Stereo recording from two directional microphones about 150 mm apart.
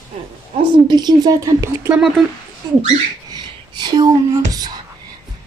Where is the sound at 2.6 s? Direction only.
25° right (ahead or behind).